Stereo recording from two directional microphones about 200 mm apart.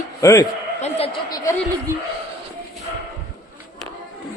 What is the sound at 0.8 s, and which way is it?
Speech, 30° left (ahead or behind).